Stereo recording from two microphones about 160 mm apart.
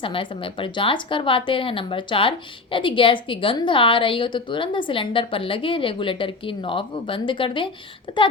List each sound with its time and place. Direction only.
0.0 s a woman's voice: 35° left (ahead or behind)